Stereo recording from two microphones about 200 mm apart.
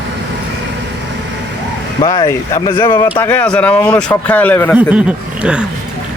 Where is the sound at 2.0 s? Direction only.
15° left (ahead or behind).